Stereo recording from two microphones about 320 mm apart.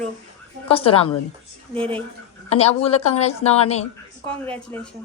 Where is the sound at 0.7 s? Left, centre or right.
Centre.